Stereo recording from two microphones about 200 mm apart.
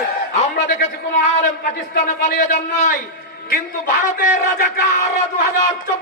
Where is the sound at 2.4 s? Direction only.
35° left (ahead or behind).